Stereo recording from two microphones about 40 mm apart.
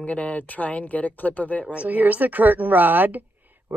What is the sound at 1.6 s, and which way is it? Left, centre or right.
Speech, right.